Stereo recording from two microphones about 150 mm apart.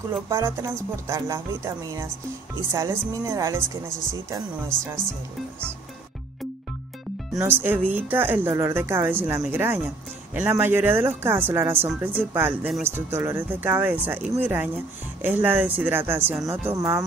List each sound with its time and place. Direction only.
0.3 s speech: 20° right (ahead or behind)
7.3 s speech: 15° right (ahead or behind)